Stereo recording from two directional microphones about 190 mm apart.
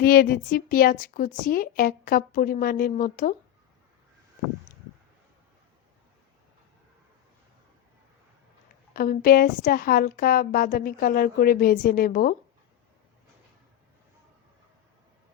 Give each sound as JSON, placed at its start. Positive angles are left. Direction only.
{"t": 0.0, "sound": "a woman's voice", "side_deg": 55}
{"t": 8.9, "sound": "a woman's voice", "side_deg": 50}